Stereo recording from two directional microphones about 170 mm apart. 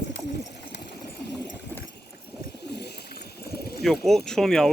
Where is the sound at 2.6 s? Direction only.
75° left (ahead or behind).